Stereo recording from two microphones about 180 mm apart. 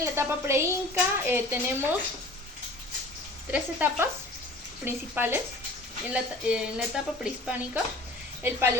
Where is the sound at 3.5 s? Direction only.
10° right (ahead or behind).